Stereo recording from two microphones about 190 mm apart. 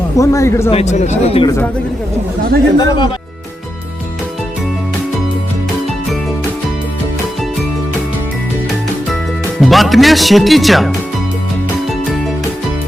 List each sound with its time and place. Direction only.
0.2 s a man's voice: 15° left (ahead or behind)
0.7 s speech: 35° left (ahead or behind)
1.5 s a man's voice: 10° left (ahead or behind)
2.7 s speech: 20° left (ahead or behind)
9.6 s speech: centre (ahead or behind)